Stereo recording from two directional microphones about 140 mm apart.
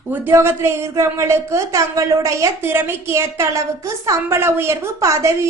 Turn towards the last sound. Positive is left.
turn(degrees=-20)  # may be behind; listen again after turning